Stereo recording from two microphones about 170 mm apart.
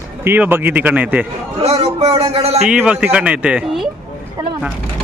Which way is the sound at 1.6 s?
40° right (ahead or behind).